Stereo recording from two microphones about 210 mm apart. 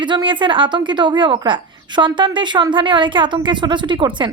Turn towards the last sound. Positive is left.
turn(degrees=-20)  # may be behind; listen again after turning